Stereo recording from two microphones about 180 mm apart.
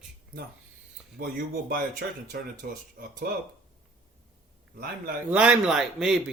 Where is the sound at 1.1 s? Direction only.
60° right (ahead or behind).